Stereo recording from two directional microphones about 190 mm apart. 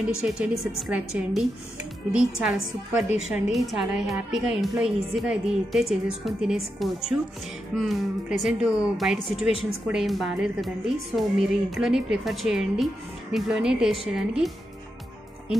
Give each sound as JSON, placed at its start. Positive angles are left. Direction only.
{"t": 0.2, "sound": "a woman's voice", "side_deg": -5}
{"t": 9.5, "sound": "speech", "side_deg": -90}
{"t": 9.8, "sound": "a woman's voice", "side_deg": 0}